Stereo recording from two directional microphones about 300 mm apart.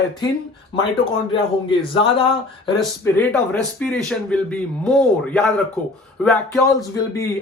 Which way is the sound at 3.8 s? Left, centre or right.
Centre.